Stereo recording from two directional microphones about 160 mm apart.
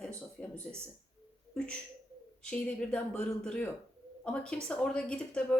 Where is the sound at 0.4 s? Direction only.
5° left (ahead or behind).